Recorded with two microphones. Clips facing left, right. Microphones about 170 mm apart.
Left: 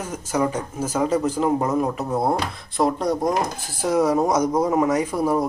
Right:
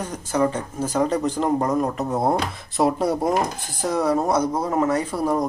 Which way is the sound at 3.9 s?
10° left (ahead or behind).